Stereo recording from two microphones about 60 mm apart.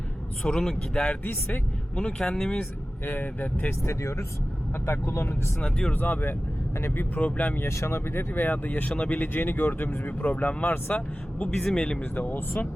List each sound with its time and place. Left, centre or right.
0.4 s speech: centre
1.0 s speech: left
2.0 s speech: centre
3.0 s speech: left
3.7 s speech: left
5.5 s speech: centre
5.9 s speech: left
7.7 s speech: left
11.5 s speech: centre
12.1 s speech: left